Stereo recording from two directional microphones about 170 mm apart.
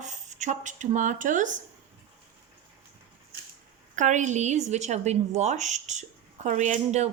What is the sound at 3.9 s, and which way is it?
A woman's voice, 45° right (ahead or behind).